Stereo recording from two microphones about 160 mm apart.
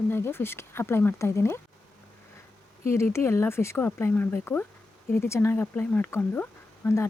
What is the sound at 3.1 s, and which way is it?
Speech, 15° left (ahead or behind).